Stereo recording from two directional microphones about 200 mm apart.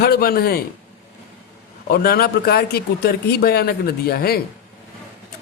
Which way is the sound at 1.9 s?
50° left (ahead or behind).